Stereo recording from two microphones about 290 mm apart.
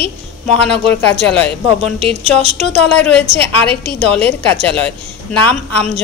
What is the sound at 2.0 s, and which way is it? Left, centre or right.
Speech, right.